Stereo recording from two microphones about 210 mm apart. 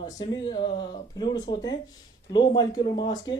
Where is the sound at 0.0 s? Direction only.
20° left (ahead or behind).